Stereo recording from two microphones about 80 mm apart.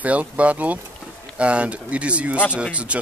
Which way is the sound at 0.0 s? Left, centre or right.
Centre.